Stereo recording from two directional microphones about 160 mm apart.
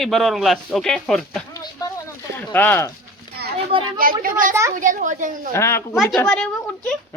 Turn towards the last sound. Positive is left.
turn(degrees=5)  # may be behind; listen again after turning